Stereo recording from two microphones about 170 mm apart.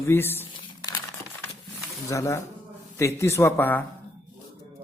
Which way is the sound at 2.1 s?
15° left (ahead or behind).